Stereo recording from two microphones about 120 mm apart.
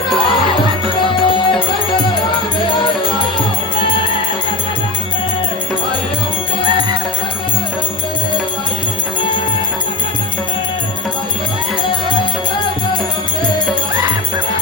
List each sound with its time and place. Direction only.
1.1 s music: 45° left (ahead or behind)